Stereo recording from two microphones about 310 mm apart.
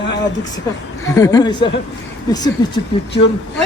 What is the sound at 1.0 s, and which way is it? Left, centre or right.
Speech, centre.